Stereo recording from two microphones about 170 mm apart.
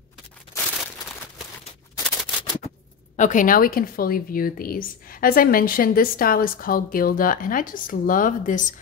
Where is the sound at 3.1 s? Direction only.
50° left (ahead or behind).